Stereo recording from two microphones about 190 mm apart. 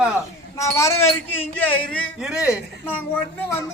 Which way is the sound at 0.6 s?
15° left (ahead or behind).